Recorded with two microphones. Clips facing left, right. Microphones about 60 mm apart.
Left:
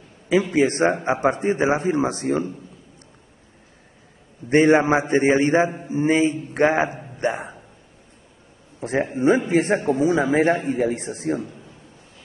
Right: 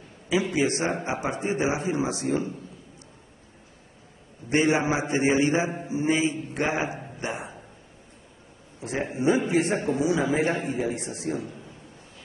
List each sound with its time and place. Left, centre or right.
0.3 s a man's voice: left
4.5 s a man's voice: left
7.2 s hiccup: left
8.8 s a man's voice: left
11.4 s a sound: centre